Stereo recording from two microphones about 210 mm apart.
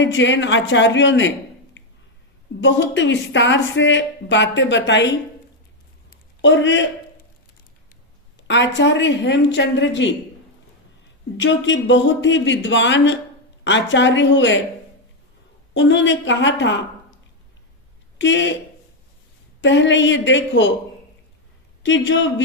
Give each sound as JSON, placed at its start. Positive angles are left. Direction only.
{"t": 0.0, "sound": "speech", "side_deg": 60}
{"t": 2.6, "sound": "speech", "side_deg": 60}
{"t": 6.4, "sound": "a man's voice", "side_deg": 60}
{"t": 8.4, "sound": "speech", "side_deg": 60}
{"t": 11.3, "sound": "speech", "side_deg": 60}
{"t": 15.7, "sound": "speech", "side_deg": 60}
{"t": 18.2, "sound": "speech", "side_deg": 60}
{"t": 19.6, "sound": "speech", "side_deg": 60}
{"t": 21.8, "sound": "speech", "side_deg": 60}